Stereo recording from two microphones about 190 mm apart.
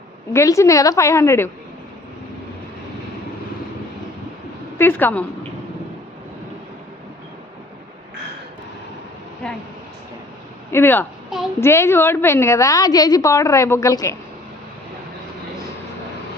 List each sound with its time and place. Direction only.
0.3 s a woman's voice: 15° left (ahead or behind)
4.8 s a woman's voice: 10° left (ahead or behind)
10.7 s a woman's voice: 10° left (ahead or behind)